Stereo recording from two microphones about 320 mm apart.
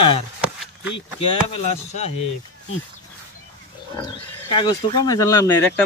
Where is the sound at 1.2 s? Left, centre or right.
Centre.